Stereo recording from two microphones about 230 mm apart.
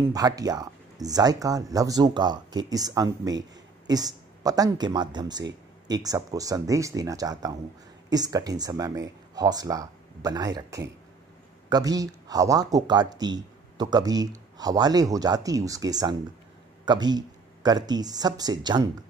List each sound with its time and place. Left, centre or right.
0.0 s speech: centre